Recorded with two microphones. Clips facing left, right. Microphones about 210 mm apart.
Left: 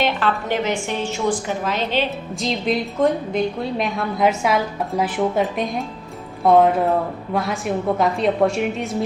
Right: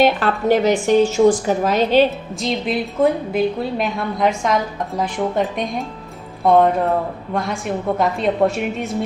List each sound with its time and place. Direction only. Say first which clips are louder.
0.0 s a woman's voice: right 5 dB; 40° right (ahead or behind)
2.0 s a woman's voice: right 2 dB; centre (ahead or behind)